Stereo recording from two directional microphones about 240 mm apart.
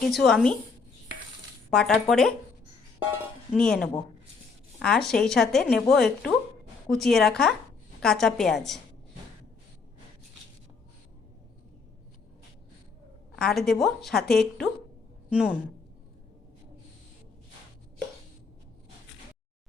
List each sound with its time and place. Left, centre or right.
0.1 s speech: centre
1.7 s speech: centre
3.5 s speech: centre
13.3 s a woman's voice: centre